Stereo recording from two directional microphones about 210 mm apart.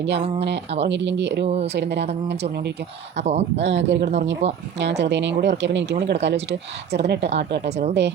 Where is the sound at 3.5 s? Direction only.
60° right (ahead or behind).